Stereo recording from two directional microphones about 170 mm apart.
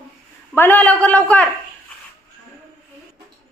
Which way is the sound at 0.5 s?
10° left (ahead or behind).